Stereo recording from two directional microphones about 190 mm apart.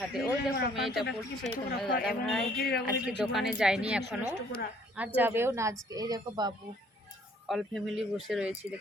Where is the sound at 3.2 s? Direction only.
Centre (ahead or behind).